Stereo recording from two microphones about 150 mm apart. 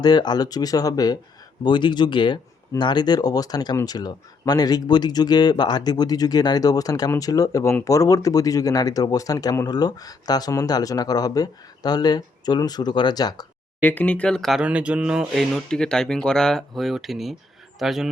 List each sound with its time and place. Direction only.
0.0 s speech: 30° left (ahead or behind)
13.8 s speech: 10° left (ahead or behind)